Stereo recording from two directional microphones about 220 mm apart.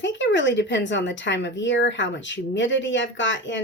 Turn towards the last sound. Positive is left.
turn(degrees=55)  # may be behind; listen again after turning